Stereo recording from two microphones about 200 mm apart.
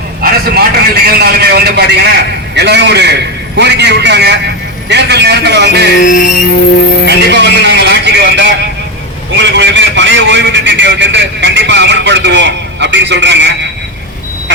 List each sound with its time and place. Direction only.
0.2 s vehicle: 50° right (ahead or behind)
1.0 s a man's voice: 50° right (ahead or behind)
6.0 s music: 40° left (ahead or behind)
7.1 s a man's voice: 55° right (ahead or behind)